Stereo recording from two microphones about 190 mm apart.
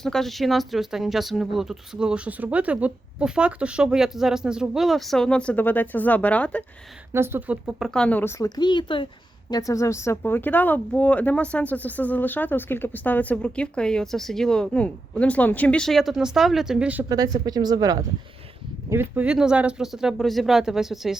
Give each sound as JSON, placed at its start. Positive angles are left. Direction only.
{"t": 0.0, "sound": "speech", "side_deg": 0}
{"t": 7.1, "sound": "speech", "side_deg": -10}
{"t": 7.9, "sound": "speech", "side_deg": 5}
{"t": 17.1, "sound": "speech", "side_deg": -20}